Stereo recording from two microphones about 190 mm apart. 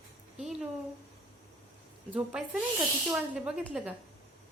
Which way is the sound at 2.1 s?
5° right (ahead or behind).